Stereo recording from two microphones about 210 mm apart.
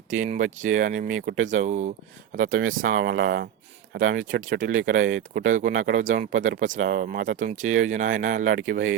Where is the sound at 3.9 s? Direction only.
40° right (ahead or behind).